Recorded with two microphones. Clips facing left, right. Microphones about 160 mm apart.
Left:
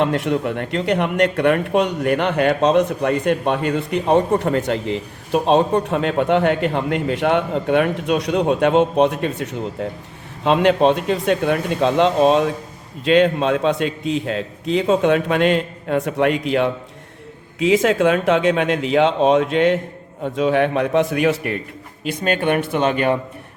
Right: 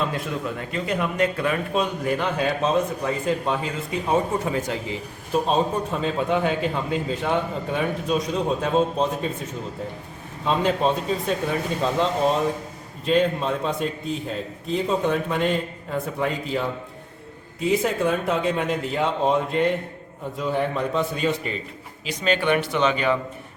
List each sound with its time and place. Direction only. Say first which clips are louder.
0.0 s a man's voice: left 8 dB; 70° left (ahead or behind)
17.6 s a man's voice: left 6 dB; 90° left; by 21.6 s 70° left (ahead or behind)
22.0 s speech: left 3 dB; 50° left (ahead or behind)